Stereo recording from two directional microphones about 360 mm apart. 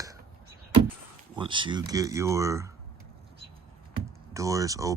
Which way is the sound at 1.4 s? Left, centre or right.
Centre.